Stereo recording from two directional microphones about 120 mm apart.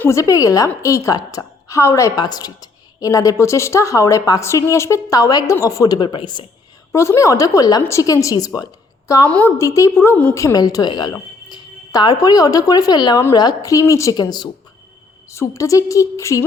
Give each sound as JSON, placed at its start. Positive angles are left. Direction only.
{"t": 0.0, "sound": "a woman's voice", "side_deg": 25}
{"t": 6.9, "sound": "a woman's voice", "side_deg": 25}
{"t": 10.3, "sound": "a woman's voice", "side_deg": 30}
{"t": 15.3, "sound": "a woman's voice", "side_deg": 25}